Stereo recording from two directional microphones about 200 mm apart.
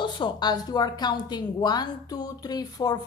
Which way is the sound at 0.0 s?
25° left (ahead or behind).